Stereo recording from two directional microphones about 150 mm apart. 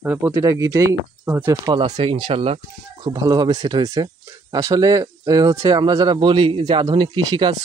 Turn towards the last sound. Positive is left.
turn(degrees=-30)  # may be behind; listen again after turning